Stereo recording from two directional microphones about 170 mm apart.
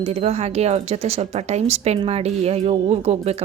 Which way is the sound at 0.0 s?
40° right (ahead or behind).